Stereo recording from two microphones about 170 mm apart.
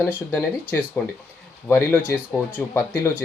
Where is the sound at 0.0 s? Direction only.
15° left (ahead or behind).